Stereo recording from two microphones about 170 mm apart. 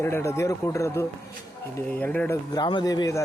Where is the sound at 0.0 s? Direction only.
15° left (ahead or behind).